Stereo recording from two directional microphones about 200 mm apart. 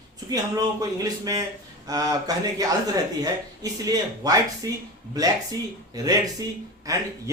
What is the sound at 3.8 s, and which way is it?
Speech, 20° right (ahead or behind).